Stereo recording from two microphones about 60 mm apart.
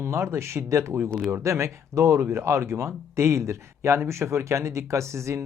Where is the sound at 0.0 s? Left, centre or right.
Right.